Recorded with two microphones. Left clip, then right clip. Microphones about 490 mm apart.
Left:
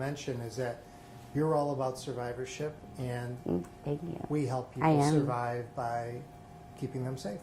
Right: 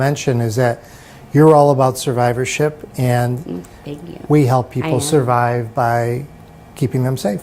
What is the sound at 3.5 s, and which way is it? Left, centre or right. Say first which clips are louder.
Speech: right 6 dB; left.